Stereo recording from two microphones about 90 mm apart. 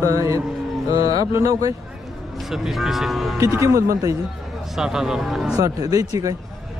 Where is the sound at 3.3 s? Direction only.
30° right (ahead or behind).